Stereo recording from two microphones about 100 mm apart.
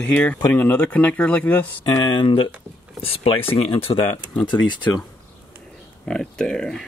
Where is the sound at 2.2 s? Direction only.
60° left (ahead or behind).